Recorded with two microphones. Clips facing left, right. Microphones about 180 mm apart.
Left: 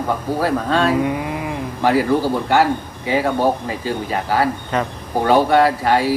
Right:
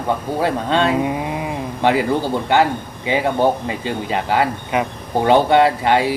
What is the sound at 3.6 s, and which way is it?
Speech, 20° right (ahead or behind).